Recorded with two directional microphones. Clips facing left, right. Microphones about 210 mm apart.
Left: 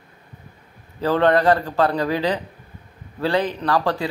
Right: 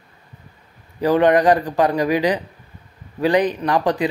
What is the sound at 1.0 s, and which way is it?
Speech, 15° right (ahead or behind).